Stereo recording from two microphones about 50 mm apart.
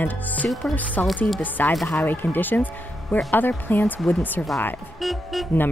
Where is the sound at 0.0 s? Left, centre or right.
Left.